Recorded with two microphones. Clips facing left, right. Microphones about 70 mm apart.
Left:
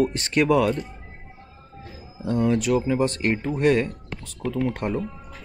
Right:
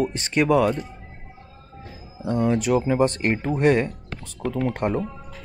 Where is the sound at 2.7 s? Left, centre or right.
Centre.